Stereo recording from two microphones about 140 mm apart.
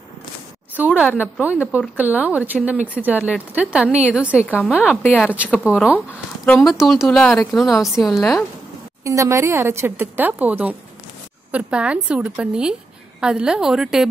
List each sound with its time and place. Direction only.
0.7 s speech: 10° right (ahead or behind)
1.0 s speech: 15° left (ahead or behind)
1.4 s speech: 10° right (ahead or behind)
5.9 s speech: 10° left (ahead or behind)
6.6 s a woman's voice: centre (ahead or behind)
9.0 s a woman's voice: 20° right (ahead or behind); by 14.0 s 5° right (ahead or behind)